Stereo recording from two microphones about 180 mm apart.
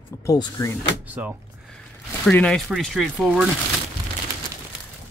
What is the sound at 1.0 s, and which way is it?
Speech, 10° right (ahead or behind).